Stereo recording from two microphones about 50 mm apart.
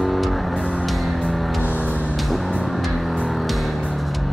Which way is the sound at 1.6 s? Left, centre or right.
Right.